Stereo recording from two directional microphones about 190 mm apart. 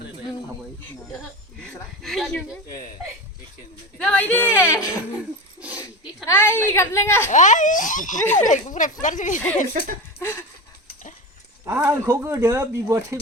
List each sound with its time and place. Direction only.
1.5 s speech: centre (ahead or behind)
3.9 s speech: 10° left (ahead or behind)
6.2 s speech: 10° left (ahead or behind)
7.3 s speech: 40° left (ahead or behind)
10.2 s a sound: 10° left (ahead or behind)
11.6 s speech: 15° right (ahead or behind)